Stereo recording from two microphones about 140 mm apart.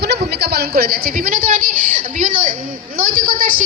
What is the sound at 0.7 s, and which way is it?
Speech, 90° right.